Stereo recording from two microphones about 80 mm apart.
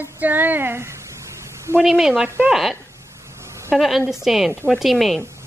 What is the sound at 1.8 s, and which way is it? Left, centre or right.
Speech, centre.